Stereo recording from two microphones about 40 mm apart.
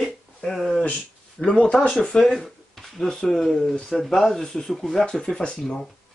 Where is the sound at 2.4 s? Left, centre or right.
Centre.